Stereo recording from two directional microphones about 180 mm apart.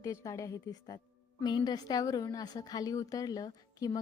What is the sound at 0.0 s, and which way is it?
A woman's voice, 15° left (ahead or behind).